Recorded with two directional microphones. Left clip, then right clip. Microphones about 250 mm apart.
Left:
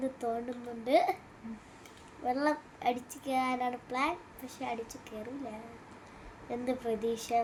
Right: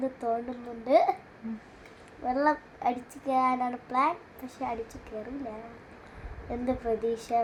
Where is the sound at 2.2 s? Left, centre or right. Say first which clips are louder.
Right 5 dB; centre.